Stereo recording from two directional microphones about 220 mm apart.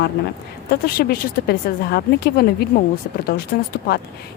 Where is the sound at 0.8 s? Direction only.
45° left (ahead or behind).